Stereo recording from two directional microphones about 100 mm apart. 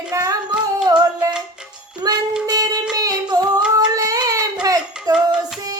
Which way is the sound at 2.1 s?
40° right (ahead or behind).